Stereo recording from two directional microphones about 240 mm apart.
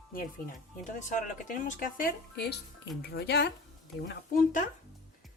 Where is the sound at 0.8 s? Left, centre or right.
Left.